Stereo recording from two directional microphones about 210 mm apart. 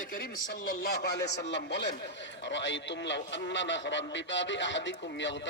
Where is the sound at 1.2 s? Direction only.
55° left (ahead or behind).